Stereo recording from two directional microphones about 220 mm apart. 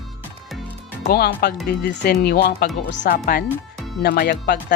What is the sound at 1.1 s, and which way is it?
A woman's voice, 45° left (ahead or behind).